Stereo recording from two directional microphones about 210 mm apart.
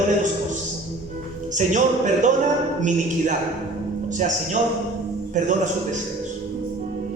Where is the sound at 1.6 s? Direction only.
35° right (ahead or behind).